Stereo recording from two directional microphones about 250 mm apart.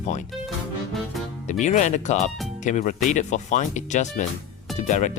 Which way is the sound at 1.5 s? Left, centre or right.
Left.